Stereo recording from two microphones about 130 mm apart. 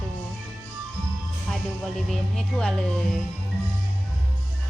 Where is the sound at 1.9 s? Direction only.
5° left (ahead or behind).